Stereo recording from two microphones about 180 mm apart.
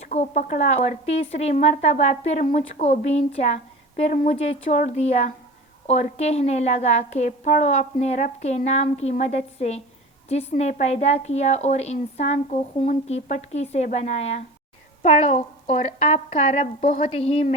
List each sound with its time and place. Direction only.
0.0 s speech: 40° left (ahead or behind)